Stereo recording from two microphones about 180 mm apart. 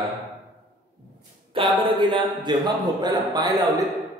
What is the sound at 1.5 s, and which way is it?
A man's voice, 25° right (ahead or behind).